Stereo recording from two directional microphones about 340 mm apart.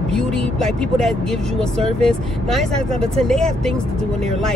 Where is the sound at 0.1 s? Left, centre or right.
Centre.